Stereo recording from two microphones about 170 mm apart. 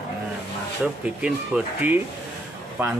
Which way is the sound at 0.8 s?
5° right (ahead or behind).